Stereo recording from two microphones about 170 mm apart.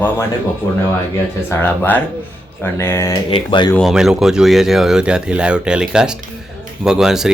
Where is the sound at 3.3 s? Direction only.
30° left (ahead or behind).